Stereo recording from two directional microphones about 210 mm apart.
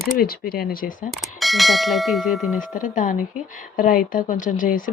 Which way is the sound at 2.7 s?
40° left (ahead or behind).